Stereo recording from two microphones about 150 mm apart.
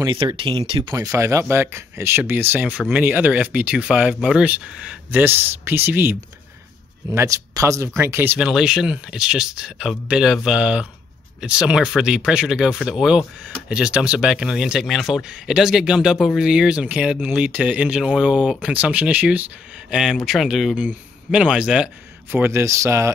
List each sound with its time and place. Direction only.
0.0 s speech: 30° right (ahead or behind)
0.9 s speech: 20° right (ahead or behind)